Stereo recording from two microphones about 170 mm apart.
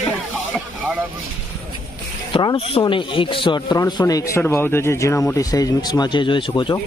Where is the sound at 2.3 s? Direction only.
25° left (ahead or behind).